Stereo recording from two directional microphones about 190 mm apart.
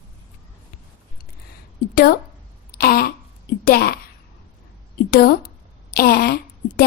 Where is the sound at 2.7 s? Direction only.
50° left (ahead or behind).